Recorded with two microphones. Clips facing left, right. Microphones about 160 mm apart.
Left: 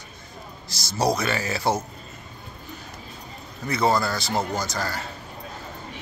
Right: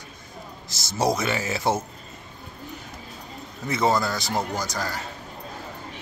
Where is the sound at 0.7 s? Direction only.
20° right (ahead or behind).